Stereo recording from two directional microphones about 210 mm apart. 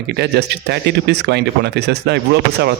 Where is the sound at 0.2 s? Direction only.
50° right (ahead or behind).